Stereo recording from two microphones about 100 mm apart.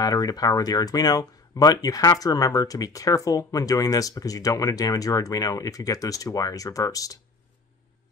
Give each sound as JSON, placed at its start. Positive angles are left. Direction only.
{"t": 0.0, "sound": "speech", "side_deg": 40}